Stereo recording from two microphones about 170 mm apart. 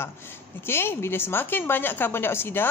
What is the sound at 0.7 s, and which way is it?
A woman's voice, 15° left (ahead or behind).